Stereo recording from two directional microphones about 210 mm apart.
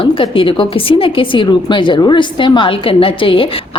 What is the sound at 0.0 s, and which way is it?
A woman's voice, 25° left (ahead or behind).